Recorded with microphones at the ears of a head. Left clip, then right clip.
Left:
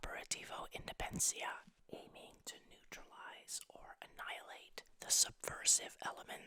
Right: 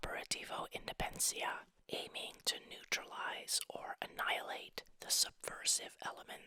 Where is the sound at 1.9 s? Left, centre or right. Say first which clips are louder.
Right 11 dB; right.